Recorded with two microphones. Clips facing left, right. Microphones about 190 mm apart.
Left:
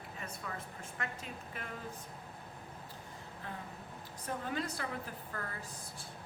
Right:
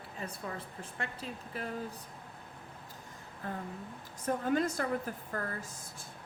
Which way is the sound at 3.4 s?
45° right (ahead or behind).